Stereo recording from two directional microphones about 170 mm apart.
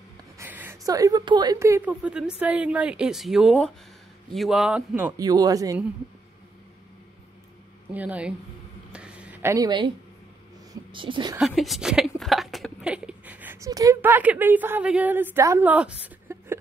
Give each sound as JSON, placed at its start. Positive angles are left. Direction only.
{"t": 0.4, "sound": "a sound", "side_deg": -10}
{"t": 0.8, "sound": "a woman's voice", "side_deg": -20}
{"t": 7.9, "sound": "a woman's voice", "side_deg": -10}
{"t": 8.9, "sound": "a sound", "side_deg": -5}
{"t": 10.7, "sound": "speech", "side_deg": -30}
{"t": 11.3, "sound": "speech", "side_deg": 0}